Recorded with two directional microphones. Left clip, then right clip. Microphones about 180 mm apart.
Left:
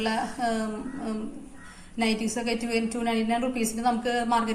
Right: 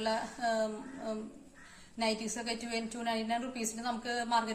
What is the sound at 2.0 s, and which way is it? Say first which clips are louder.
A woman's voice: left 7 dB; 30° right (ahead or behind).